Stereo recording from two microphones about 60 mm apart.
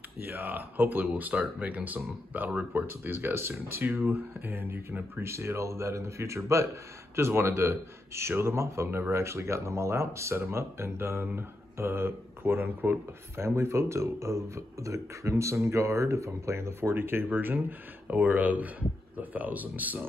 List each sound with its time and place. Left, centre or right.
0.2 s speech: right
5.3 s speech: right